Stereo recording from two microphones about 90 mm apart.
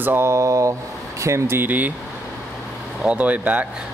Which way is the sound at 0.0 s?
25° right (ahead or behind).